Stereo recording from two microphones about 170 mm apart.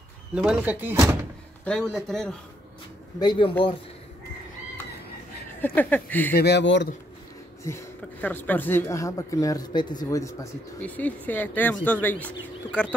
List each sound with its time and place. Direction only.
0.3 s speech: 5° right (ahead or behind)
1.6 s speech: 5° left (ahead or behind)
3.2 s speech: 30° left (ahead or behind)
5.6 s speech: 10° left (ahead or behind)
6.3 s speech: 75° left (ahead or behind)
7.6 s speech: 15° left (ahead or behind)